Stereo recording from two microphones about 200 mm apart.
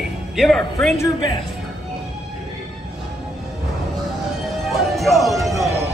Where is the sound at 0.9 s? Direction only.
20° left (ahead or behind).